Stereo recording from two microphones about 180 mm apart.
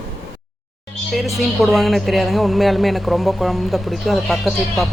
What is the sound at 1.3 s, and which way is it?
A woman's voice, centre (ahead or behind).